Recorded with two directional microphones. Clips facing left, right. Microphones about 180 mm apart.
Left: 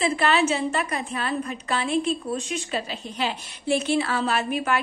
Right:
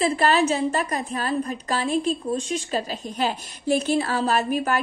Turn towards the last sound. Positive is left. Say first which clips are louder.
# right 2 dB
turn(degrees=-40)  # may be behind; listen again after turning